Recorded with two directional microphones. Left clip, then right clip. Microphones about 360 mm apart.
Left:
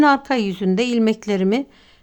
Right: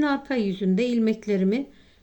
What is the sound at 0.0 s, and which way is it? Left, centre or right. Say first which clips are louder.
A woman's voice: left 9 dB; centre.